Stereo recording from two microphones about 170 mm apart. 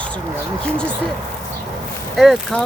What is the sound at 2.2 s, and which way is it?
Speech, centre (ahead or behind).